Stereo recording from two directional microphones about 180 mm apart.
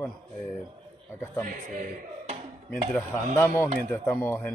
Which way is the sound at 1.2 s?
10° left (ahead or behind).